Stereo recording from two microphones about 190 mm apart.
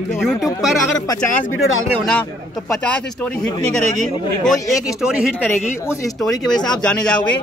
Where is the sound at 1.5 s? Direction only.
90° left.